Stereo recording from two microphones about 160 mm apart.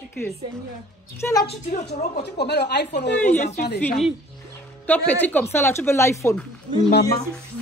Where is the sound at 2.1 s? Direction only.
90° left.